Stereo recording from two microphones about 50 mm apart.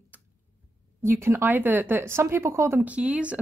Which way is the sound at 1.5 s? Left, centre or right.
Right.